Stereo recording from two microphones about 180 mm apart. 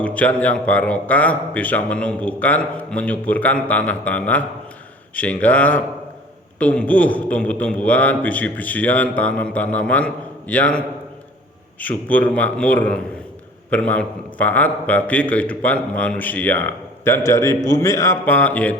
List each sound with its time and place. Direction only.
0.0 s a man's voice: 10° left (ahead or behind)